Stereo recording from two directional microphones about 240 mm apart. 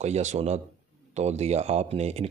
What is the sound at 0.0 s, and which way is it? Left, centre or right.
Speech, right.